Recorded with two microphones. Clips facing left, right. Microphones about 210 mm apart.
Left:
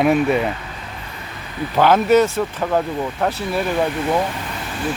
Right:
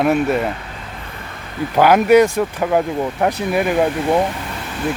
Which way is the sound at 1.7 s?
10° right (ahead or behind).